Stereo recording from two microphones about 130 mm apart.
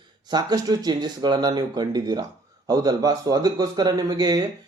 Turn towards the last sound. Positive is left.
turn(degrees=-30)  # may be behind; listen again after turning